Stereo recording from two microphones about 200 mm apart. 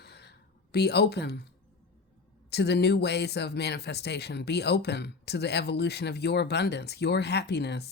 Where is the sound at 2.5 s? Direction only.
55° left (ahead or behind).